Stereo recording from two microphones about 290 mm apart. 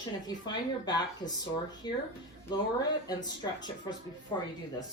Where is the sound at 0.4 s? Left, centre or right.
Centre.